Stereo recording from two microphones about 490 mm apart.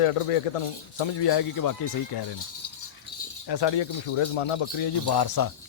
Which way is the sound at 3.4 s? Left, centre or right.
Left.